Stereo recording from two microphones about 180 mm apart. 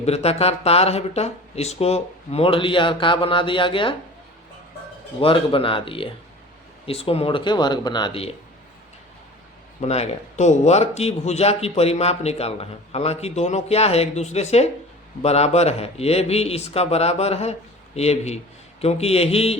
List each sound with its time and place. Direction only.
0.0 s speech: 35° left (ahead or behind)
5.2 s speech: 30° left (ahead or behind)
9.8 s speech: 40° left (ahead or behind)